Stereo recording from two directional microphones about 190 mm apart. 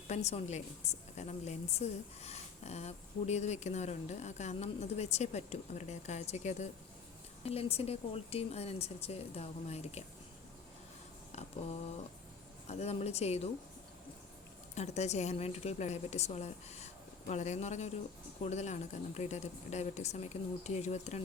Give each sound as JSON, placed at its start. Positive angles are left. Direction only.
{"t": 0.1, "sound": "a woman's voice", "side_deg": 35}
{"t": 11.3, "sound": "a sound", "side_deg": 35}
{"t": 12.6, "sound": "a woman's voice", "side_deg": 35}
{"t": 14.8, "sound": "a woman's voice", "side_deg": 35}